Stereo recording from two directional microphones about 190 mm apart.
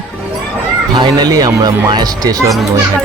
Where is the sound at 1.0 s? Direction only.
20° right (ahead or behind).